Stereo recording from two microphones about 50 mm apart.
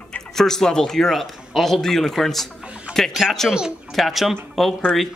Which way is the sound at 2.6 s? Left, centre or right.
Right.